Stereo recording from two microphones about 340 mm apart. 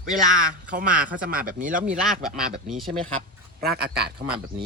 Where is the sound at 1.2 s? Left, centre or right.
Right.